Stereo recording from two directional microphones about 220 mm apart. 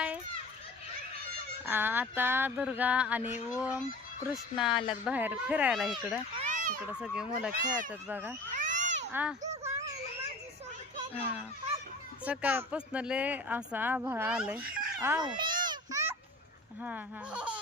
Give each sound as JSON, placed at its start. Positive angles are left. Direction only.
{"t": 1.6, "sound": "speech", "side_deg": -10}
{"t": 4.7, "sound": "speech", "side_deg": 20}
{"t": 5.0, "sound": "speech", "side_deg": -5}
{"t": 6.4, "sound": "children playing", "side_deg": -35}
{"t": 7.0, "sound": "speech", "side_deg": -5}
{"t": 8.5, "sound": "cat", "side_deg": -35}
{"t": 9.1, "sound": "speech", "side_deg": -10}
{"t": 12.2, "sound": "speech", "side_deg": -5}
{"t": 15.2, "sound": "a sound", "side_deg": -20}
{"t": 16.8, "sound": "speech", "side_deg": -5}